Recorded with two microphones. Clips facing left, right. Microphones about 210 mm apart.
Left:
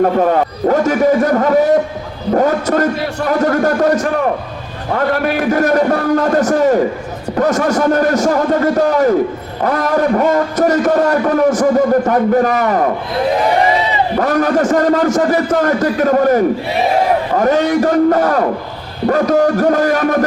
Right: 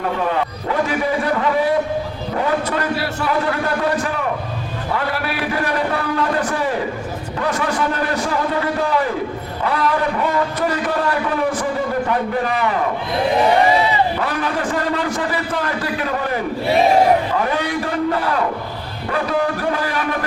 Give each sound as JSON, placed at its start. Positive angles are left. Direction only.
{"t": 0.0, "sound": "a man's voice", "side_deg": 45}
{"t": 14.2, "sound": "a man's voice", "side_deg": 45}